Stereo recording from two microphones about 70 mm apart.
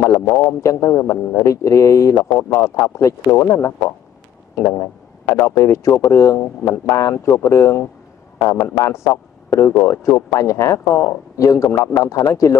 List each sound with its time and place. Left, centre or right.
0.3 s speech: left
0.6 s a man's voice: left
8.8 s a man's voice: left